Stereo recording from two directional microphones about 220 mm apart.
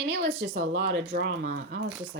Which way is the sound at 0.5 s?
40° right (ahead or behind).